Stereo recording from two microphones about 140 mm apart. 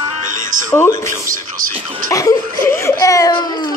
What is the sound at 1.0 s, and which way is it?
Speech, 20° left (ahead or behind).